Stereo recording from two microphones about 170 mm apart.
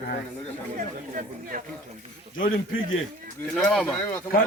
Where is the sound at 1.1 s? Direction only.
55° right (ahead or behind).